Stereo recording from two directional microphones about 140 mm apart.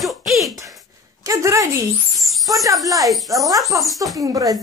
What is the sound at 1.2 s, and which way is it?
Speech, 25° right (ahead or behind).